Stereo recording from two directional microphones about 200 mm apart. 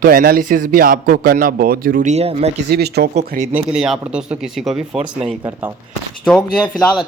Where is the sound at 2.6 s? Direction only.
55° right (ahead or behind).